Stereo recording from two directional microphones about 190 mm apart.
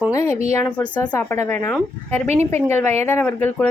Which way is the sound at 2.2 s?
35° right (ahead or behind).